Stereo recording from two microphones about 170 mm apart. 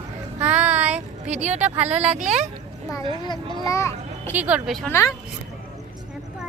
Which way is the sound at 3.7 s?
15° left (ahead or behind).